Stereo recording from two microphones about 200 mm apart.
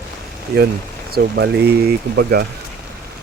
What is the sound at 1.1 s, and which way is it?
Speech, 55° right (ahead or behind).